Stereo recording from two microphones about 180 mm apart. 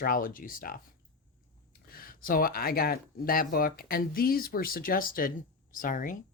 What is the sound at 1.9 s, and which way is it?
Speech, 55° left (ahead or behind).